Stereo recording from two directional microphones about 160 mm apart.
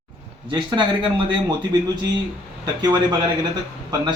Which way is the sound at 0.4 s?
30° right (ahead or behind).